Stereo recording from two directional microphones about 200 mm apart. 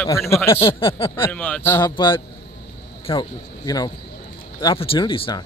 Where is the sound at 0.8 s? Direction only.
25° left (ahead or behind).